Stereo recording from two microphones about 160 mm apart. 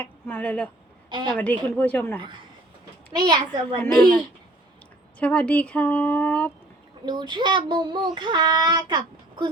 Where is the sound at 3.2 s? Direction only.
25° right (ahead or behind).